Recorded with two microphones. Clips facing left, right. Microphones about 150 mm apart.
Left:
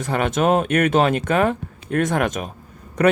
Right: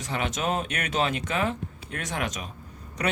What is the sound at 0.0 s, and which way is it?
Speech, 55° left (ahead or behind).